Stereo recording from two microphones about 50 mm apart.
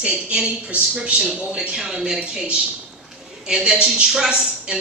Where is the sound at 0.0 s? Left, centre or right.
Right.